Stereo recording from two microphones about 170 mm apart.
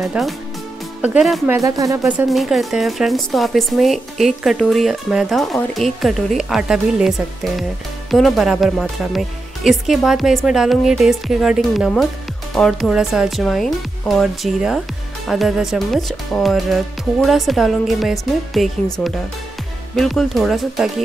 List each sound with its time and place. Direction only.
0.0 s speech: centre (ahead or behind)
1.5 s speech: 20° right (ahead or behind)
2.0 s speech: 5° right (ahead or behind)
20.0 s speech: centre (ahead or behind)